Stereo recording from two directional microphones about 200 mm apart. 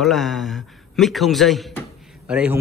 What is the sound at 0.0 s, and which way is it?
Speech, centre (ahead or behind).